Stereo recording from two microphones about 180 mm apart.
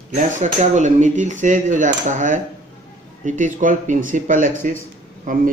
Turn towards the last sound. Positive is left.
turn(degrees=-45)  # may be behind; listen again after turning